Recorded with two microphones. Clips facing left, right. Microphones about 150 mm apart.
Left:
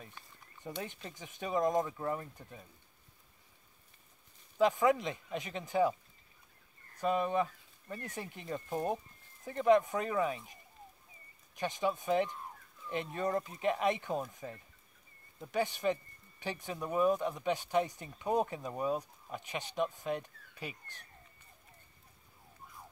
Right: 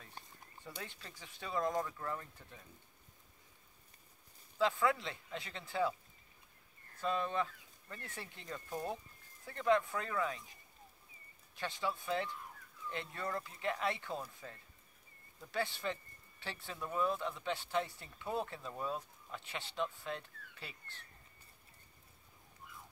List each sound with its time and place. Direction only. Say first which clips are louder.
0.7 s speech: left 7 dB; 20° left (ahead or behind)
4.6 s speech: left 5 dB; 15° left (ahead or behind)
7.0 s speech: left 5 dB; 15° left (ahead or behind)